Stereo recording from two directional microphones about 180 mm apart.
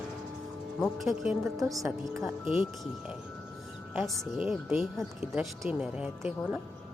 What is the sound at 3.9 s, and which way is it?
Speech, centre (ahead or behind).